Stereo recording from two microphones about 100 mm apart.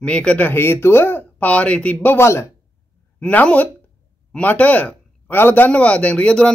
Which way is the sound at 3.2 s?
15° left (ahead or behind).